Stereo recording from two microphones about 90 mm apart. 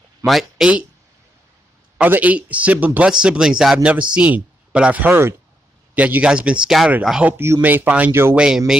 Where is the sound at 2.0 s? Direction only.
15° right (ahead or behind).